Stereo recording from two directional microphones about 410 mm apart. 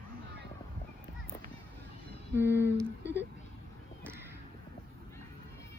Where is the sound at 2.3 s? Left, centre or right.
Centre.